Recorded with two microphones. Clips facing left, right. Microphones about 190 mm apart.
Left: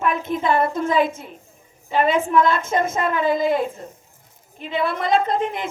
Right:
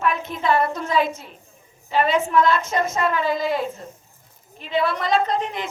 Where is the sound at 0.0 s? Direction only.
50° left (ahead or behind).